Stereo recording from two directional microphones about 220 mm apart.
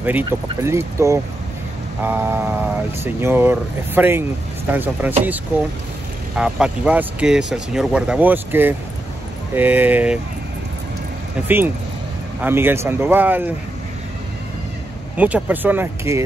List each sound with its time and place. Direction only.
0.0 s speech: 10° right (ahead or behind)
11.4 s speech: 10° right (ahead or behind)
15.1 s speech: 5° right (ahead or behind)